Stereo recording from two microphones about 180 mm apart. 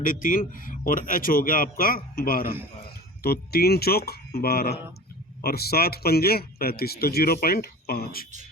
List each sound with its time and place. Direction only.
0.0 s a man's voice: 50° left (ahead or behind)